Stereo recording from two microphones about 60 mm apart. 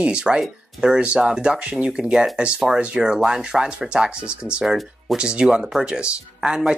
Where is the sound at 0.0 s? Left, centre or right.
Centre.